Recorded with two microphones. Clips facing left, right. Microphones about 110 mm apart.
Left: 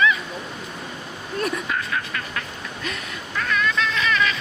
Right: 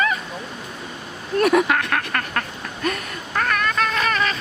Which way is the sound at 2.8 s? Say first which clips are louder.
Right 8 dB; 50° right (ahead or behind).